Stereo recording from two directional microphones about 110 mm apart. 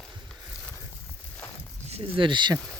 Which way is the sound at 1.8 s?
60° right (ahead or behind).